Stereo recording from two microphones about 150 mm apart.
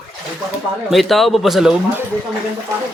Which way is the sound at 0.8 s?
Centre (ahead or behind).